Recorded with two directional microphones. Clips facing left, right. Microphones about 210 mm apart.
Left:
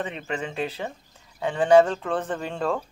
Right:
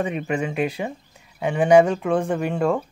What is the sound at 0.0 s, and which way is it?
Speech, 10° right (ahead or behind).